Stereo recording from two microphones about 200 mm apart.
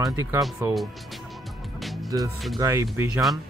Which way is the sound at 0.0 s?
15° right (ahead or behind).